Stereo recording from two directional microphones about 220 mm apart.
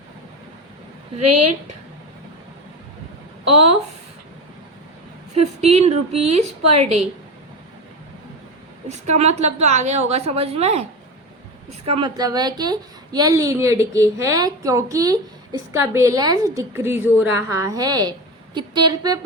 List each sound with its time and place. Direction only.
1.2 s a woman's voice: 90° right
5.3 s a woman's voice: 30° right (ahead or behind)
8.9 s a woman's voice: 30° right (ahead or behind)
11.9 s a woman's voice: 20° right (ahead or behind)